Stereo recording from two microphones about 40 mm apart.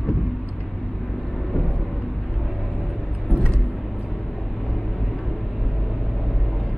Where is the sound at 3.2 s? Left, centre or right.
Left.